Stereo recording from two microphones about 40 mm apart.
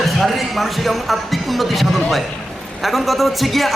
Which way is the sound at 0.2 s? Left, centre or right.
Centre.